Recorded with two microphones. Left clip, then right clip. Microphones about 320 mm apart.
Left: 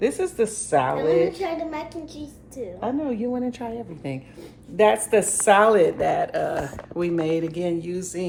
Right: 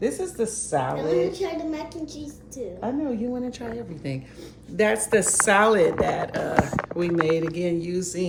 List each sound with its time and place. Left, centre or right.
0.0 s a child's voice: left
4.8 s a woman's voice: centre